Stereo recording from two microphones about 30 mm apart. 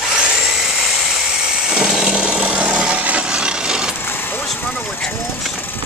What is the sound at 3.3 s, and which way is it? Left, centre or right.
Wood, right.